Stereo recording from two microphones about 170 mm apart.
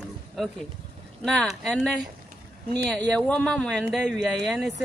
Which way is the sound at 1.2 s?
Centre (ahead or behind).